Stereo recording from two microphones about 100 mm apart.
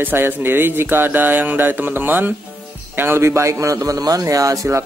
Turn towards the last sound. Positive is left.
turn(degrees=-30)  # may be behind; listen again after turning